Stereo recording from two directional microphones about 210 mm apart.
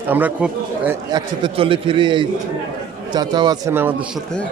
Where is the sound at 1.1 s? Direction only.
25° right (ahead or behind).